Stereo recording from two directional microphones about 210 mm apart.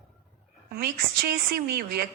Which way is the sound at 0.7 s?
45° right (ahead or behind).